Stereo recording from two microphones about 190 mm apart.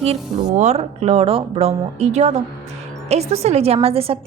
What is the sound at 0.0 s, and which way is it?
A woman's voice, 35° right (ahead or behind).